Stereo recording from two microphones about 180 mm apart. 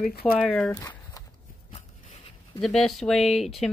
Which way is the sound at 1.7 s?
30° left (ahead or behind).